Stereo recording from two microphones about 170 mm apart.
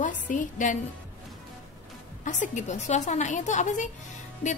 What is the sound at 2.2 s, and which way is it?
A woman's voice, 45° left (ahead or behind).